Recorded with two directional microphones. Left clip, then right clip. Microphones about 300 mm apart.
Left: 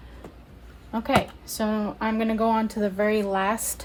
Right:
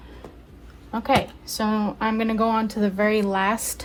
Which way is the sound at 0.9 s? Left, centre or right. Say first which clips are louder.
Right 2 dB; centre.